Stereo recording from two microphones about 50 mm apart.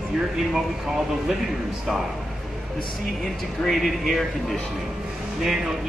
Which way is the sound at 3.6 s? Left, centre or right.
Centre.